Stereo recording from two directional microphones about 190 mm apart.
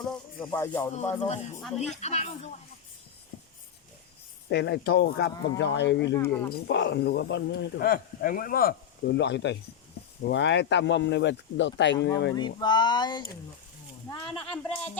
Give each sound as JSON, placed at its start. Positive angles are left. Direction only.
{"t": 0.0, "sound": "music", "side_deg": 10}
{"t": 0.9, "sound": "speech", "side_deg": 35}
{"t": 4.4, "sound": "speech", "side_deg": 65}
{"t": 6.1, "sound": "speech", "side_deg": 15}
{"t": 6.5, "sound": "speech", "side_deg": 65}
{"t": 12.4, "sound": "speech", "side_deg": 25}